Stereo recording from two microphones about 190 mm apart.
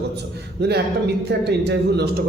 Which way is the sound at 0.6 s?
60° right (ahead or behind).